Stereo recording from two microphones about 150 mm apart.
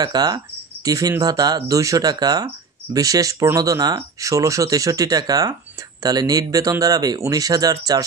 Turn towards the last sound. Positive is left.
turn(degrees=-25)  # may be behind; listen again after turning